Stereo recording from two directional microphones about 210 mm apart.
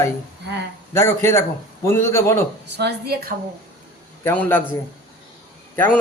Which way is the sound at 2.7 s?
50° right (ahead or behind).